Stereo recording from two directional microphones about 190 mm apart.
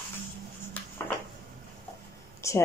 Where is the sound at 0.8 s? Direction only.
10° left (ahead or behind).